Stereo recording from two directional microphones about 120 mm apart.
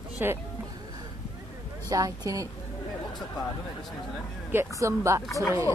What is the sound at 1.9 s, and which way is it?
Speech, 30° right (ahead or behind).